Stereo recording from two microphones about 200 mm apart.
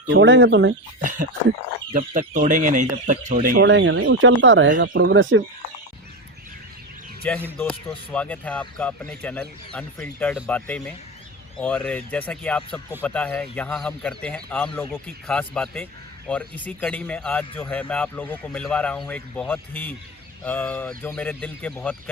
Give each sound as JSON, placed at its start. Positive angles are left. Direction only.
{"t": 0.1, "sound": "speech", "side_deg": -65}
{"t": 1.9, "sound": "speech", "side_deg": -40}
{"t": 3.7, "sound": "speech", "side_deg": -70}
{"t": 7.3, "sound": "speech", "side_deg": 10}